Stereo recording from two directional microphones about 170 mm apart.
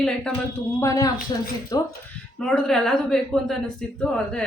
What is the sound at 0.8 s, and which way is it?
Speech, 20° left (ahead or behind).